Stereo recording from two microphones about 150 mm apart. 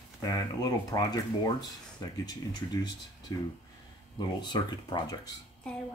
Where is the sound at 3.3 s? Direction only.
25° left (ahead or behind).